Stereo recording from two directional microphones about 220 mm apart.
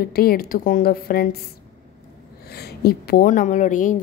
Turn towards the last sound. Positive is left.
turn(degrees=35)  # may be behind; listen again after turning